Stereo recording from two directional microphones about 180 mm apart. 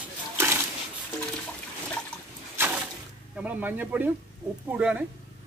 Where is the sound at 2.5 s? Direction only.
10° right (ahead or behind).